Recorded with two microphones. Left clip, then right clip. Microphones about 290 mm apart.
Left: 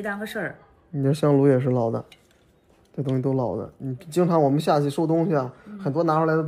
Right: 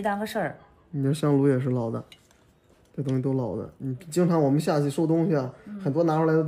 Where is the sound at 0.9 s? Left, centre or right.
Centre.